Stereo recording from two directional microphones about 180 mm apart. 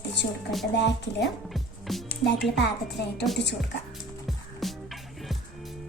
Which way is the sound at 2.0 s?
70° left (ahead or behind).